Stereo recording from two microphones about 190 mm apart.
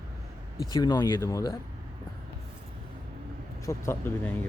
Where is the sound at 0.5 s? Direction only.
20° left (ahead or behind).